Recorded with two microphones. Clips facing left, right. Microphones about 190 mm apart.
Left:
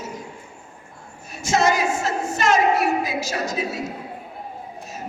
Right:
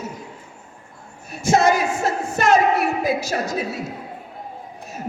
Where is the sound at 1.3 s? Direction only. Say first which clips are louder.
Right 3 dB; 55° right (ahead or behind).